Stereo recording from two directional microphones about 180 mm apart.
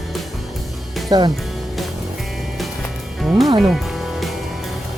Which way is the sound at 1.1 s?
20° right (ahead or behind).